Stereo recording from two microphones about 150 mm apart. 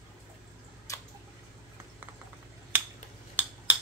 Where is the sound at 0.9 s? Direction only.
20° left (ahead or behind).